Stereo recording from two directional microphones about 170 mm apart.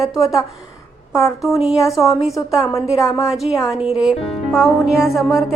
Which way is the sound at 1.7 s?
20° left (ahead or behind).